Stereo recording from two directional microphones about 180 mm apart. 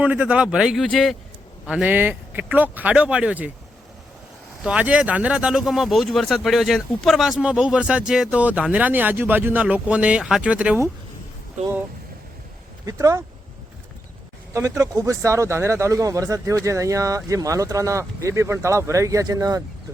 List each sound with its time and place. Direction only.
0.0 s speech: 5° right (ahead or behind)
4.6 s speech: 5° right (ahead or behind)
12.8 s speech: 20° right (ahead or behind)
14.5 s speech: 15° right (ahead or behind)